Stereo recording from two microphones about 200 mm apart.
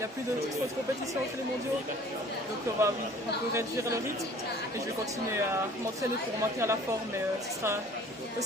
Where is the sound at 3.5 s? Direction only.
15° right (ahead or behind).